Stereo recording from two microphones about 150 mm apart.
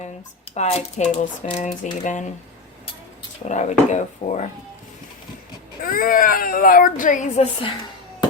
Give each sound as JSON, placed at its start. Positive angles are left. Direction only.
{"t": 0.5, "sound": "speech", "side_deg": 50}
{"t": 3.4, "sound": "speech", "side_deg": 55}
{"t": 5.8, "sound": "speech", "side_deg": 70}